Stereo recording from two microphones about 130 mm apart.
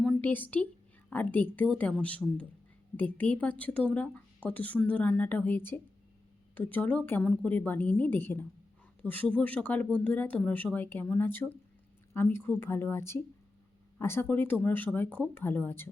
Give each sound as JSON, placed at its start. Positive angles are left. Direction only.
{"t": 0.0, "sound": "a woman's voice", "side_deg": 10}